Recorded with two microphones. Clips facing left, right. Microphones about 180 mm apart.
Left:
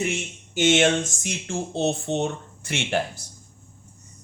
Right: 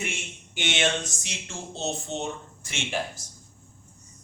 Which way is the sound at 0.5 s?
45° left (ahead or behind).